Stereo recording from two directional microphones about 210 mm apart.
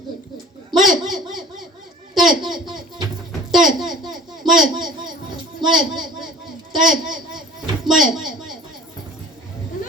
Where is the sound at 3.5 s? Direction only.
Centre (ahead or behind).